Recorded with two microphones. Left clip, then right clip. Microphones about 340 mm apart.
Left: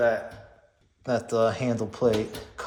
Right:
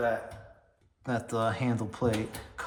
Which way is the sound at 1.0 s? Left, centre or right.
Centre.